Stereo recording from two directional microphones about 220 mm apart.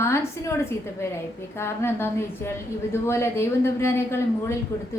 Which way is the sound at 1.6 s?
10° left (ahead or behind).